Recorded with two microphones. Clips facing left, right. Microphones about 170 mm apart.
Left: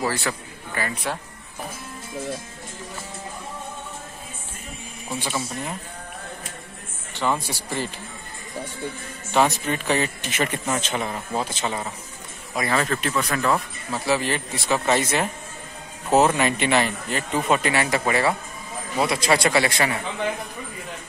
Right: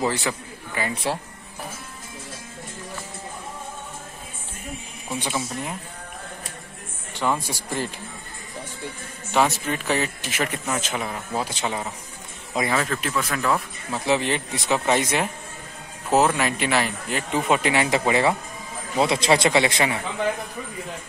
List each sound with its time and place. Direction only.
0.0 s a man's voice: 15° right (ahead or behind)
0.9 s speech: 30° right (ahead or behind)
5.2 s a man's voice: 15° right (ahead or behind)
7.4 s a man's voice: 10° right (ahead or behind)
9.3 s speech: 5° right (ahead or behind)
12.7 s speech: centre (ahead or behind)
14.0 s a man's voice: 20° right (ahead or behind)
16.1 s a man's voice: 5° left (ahead or behind); by 20.0 s 20° right (ahead or behind)